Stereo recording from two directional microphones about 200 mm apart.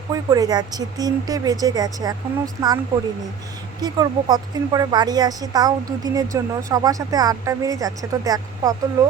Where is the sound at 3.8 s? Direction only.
20° right (ahead or behind).